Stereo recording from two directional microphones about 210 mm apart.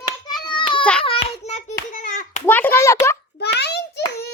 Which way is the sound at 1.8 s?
40° left (ahead or behind).